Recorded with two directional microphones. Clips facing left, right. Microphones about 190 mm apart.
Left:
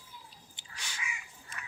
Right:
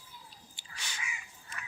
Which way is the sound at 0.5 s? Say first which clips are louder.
Even; 15° left (ahead or behind).